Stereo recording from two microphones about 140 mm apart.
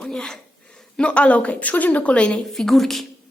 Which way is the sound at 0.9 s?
10° left (ahead or behind).